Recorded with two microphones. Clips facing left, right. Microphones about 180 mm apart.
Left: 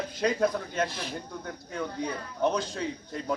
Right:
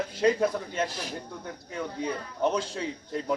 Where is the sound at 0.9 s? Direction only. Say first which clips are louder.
Even; 40° right (ahead or behind).